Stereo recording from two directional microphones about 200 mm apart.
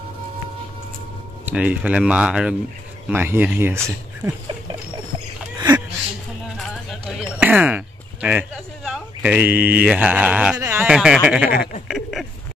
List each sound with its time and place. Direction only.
1.4 s speech: 5° right (ahead or behind)
6.9 s speech: centre (ahead or behind)
11.9 s a sound: centre (ahead or behind)